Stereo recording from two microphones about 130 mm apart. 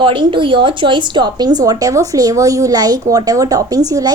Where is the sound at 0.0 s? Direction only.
40° right (ahead or behind).